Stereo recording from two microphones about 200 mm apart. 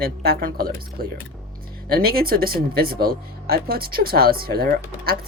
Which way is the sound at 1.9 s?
50° right (ahead or behind).